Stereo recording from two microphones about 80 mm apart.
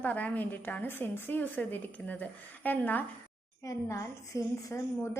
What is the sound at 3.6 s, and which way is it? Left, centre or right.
A woman's voice, left.